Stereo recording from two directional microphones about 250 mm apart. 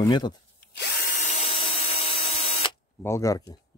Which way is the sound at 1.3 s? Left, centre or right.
Left.